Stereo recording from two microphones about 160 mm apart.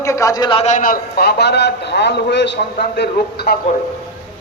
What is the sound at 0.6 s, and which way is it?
A man's voice, 55° left (ahead or behind).